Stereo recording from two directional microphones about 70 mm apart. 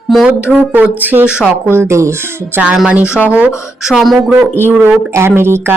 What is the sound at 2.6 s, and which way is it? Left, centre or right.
Speech, centre.